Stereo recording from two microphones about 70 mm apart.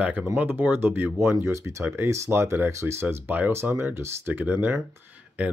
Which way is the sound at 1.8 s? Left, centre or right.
Right.